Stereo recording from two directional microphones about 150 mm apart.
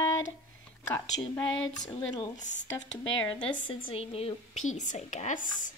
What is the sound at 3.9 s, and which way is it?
A woman's voice, 40° left (ahead or behind).